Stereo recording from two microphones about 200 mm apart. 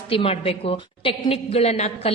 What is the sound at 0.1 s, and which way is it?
A woman's voice, 30° left (ahead or behind).